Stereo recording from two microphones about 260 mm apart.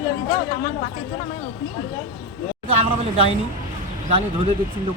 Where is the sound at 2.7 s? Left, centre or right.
Right.